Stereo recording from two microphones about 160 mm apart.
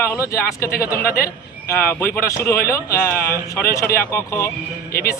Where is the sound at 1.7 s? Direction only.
15° left (ahead or behind).